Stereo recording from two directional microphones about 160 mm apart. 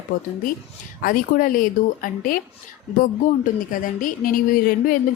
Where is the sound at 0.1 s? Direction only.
55° left (ahead or behind).